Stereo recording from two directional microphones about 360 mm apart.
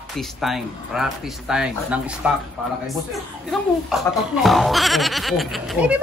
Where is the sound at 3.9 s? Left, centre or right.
Centre.